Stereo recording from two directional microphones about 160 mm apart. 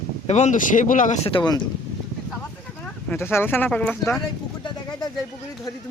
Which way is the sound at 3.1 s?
15° left (ahead or behind).